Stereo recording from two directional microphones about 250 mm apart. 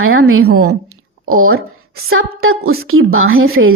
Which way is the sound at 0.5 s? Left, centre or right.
Right.